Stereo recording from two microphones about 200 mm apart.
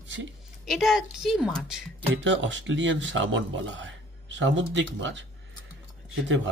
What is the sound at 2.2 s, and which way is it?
Speech, 65° right (ahead or behind).